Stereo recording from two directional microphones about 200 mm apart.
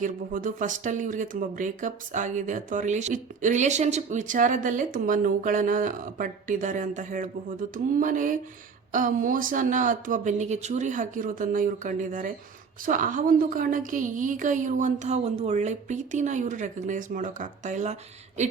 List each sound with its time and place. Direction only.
0.0 s speech: 40° right (ahead or behind)